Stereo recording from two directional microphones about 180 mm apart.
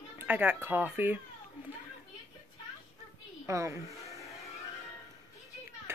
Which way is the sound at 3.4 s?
15° right (ahead or behind).